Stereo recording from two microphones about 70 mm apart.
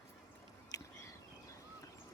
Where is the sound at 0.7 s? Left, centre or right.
Left.